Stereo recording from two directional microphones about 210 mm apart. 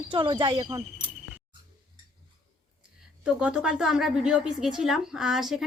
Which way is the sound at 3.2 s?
5° right (ahead or behind).